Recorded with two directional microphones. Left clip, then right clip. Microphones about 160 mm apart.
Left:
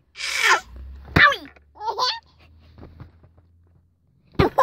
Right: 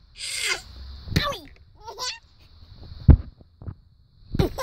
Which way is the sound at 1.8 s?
30° right (ahead or behind).